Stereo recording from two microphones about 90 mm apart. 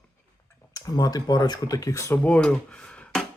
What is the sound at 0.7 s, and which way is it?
Speech, 45° left (ahead or behind).